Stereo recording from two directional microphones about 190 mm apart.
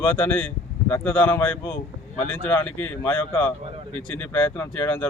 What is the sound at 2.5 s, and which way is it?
Speech, 10° left (ahead or behind).